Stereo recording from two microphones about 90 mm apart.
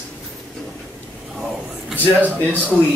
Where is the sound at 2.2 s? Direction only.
15° right (ahead or behind).